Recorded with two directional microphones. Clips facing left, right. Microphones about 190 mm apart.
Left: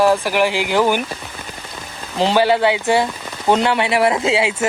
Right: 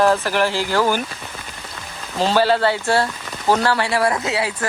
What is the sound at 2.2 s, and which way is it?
Speech, 15° left (ahead or behind).